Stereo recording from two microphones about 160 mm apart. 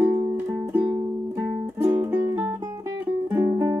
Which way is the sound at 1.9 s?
15° right (ahead or behind).